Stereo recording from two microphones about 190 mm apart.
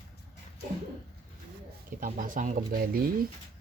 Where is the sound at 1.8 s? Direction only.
45° right (ahead or behind).